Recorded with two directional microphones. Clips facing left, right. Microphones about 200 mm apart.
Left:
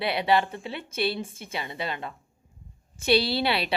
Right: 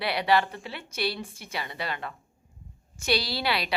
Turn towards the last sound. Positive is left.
turn(degrees=25)  # may be behind; listen again after turning